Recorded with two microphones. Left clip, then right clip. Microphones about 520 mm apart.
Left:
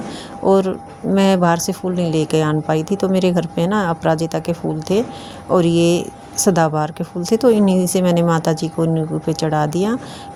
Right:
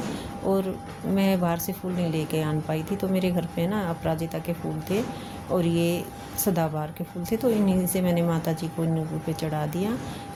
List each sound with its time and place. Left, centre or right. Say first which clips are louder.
0.4 s speech: left 12 dB; right